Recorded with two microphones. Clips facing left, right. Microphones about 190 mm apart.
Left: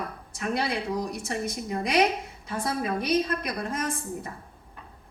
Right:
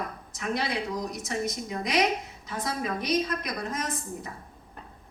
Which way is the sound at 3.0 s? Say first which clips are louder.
Left 1 dB; 60° left (ahead or behind).